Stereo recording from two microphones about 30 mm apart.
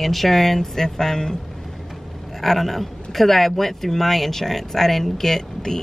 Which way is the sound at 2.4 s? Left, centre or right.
Centre.